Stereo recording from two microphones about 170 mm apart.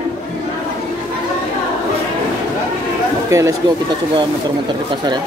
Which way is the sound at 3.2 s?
20° right (ahead or behind).